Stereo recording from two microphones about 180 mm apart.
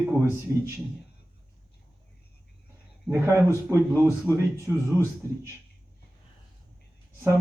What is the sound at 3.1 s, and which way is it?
Speech, 15° right (ahead or behind).